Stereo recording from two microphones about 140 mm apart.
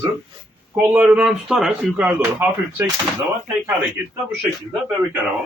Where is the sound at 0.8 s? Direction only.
10° right (ahead or behind).